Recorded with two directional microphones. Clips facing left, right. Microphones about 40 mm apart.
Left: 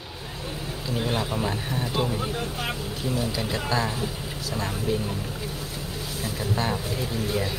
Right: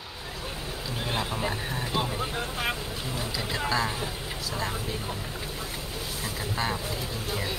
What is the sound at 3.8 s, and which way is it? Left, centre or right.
Speech, right.